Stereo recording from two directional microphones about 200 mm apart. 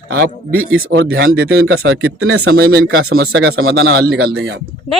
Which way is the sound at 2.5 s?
50° right (ahead or behind).